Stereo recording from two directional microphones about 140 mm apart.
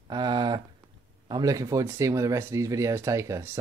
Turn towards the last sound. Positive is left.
turn(degrees=-20)  # may be behind; listen again after turning